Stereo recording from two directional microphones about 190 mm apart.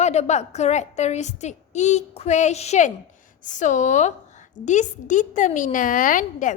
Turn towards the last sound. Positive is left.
turn(degrees=45)  # may be behind; listen again after turning